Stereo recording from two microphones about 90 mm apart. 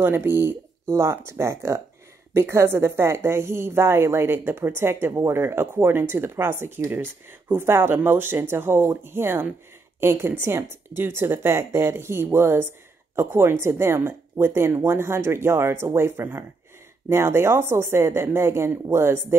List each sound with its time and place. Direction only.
0.0 s speech: 25° right (ahead or behind)